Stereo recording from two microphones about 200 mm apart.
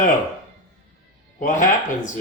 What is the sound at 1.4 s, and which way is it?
Speech, 40° left (ahead or behind).